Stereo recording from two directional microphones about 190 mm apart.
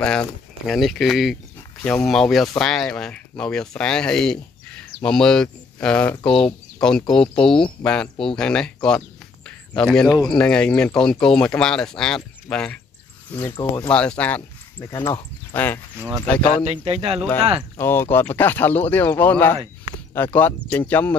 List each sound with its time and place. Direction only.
0.0 s speech: 5° left (ahead or behind)
14.8 s speech: 20° left (ahead or behind)
16.0 s speech: 15° right (ahead or behind)
17.7 s speech: 10° left (ahead or behind)